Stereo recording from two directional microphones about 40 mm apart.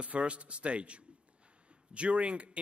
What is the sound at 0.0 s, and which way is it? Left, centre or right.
A man's voice, right.